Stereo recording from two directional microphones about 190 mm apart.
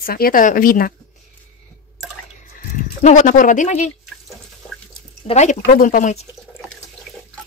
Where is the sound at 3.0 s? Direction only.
40° left (ahead or behind).